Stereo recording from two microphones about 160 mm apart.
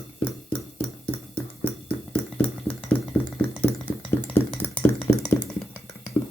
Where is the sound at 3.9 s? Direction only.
10° left (ahead or behind).